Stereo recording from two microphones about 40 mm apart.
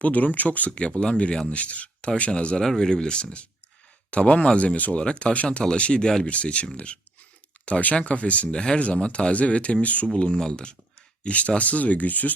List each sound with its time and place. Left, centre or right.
0.0 s speech: left
0.8 s speech: left
2.6 s speech: centre; by 4.9 s left
4.9 s speech: left
6.2 s speech: left
10.3 s speech: centre
11.2 s speech: left